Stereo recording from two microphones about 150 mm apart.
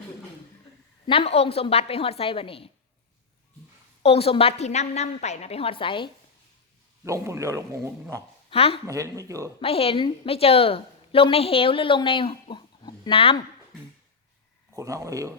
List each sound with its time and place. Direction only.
1.0 s a woman's voice: 40° left (ahead or behind)
4.0 s a woman's voice: 40° left (ahead or behind)
7.0 s speech: 20° right (ahead or behind)
8.4 s speech: 40° left (ahead or behind)
8.9 s speech: 20° right (ahead or behind)
9.6 s a woman's voice: 40° left (ahead or behind)
14.8 s speech: 20° right (ahead or behind)